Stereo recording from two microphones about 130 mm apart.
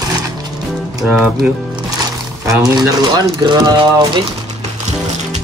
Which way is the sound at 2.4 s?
25° right (ahead or behind).